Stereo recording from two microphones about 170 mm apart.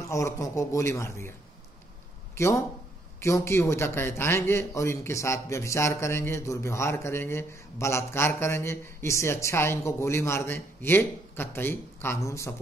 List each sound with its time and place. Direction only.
0.1 s a man's voice: 20° left (ahead or behind)
2.3 s a man's voice: 15° left (ahead or behind)